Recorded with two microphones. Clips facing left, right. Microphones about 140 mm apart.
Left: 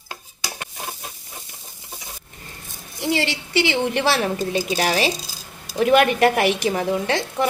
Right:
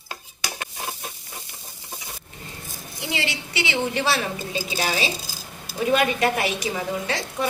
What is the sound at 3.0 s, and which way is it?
A woman's voice, 45° left (ahead or behind).